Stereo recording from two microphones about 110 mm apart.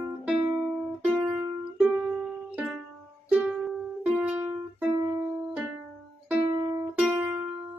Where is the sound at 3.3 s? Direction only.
10° right (ahead or behind).